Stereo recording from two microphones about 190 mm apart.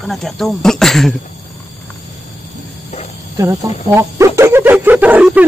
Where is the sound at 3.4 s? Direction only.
15° right (ahead or behind).